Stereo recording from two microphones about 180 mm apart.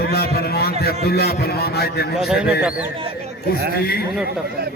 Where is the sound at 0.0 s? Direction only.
60° left (ahead or behind).